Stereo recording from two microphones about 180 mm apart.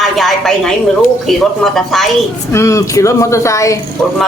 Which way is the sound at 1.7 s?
Centre (ahead or behind).